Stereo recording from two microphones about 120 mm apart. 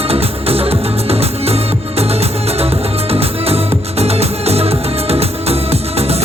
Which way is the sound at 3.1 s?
55° right (ahead or behind).